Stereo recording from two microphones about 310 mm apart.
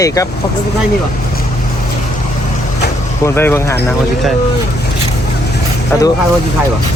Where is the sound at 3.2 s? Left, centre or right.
Centre.